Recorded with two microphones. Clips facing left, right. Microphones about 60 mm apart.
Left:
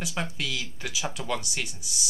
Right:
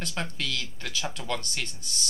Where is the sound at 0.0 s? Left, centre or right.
Centre.